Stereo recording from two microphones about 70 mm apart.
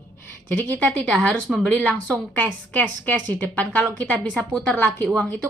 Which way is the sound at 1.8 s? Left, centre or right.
Centre.